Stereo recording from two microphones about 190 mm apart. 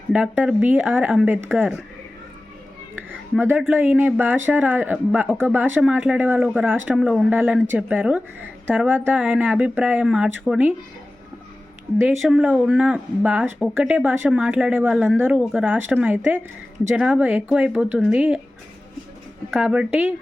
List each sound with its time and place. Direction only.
0.1 s speech: 5° right (ahead or behind)
3.7 s speech: 10° right (ahead or behind)
12.0 s speech: 5° right (ahead or behind)
19.5 s speech: 5° right (ahead or behind)